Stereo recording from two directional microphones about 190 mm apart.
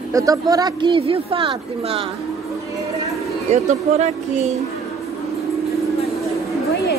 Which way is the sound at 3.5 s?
35° right (ahead or behind).